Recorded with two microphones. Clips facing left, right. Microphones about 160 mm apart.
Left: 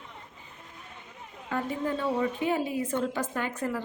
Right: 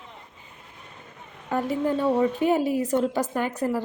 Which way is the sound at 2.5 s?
40° right (ahead or behind).